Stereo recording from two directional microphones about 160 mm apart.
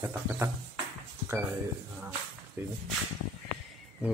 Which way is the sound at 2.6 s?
15° right (ahead or behind).